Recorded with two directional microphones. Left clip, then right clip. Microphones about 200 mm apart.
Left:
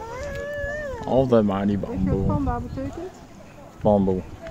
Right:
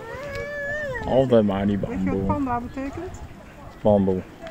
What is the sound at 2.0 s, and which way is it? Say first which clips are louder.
Speech: right 1 dB; 50° right (ahead or behind).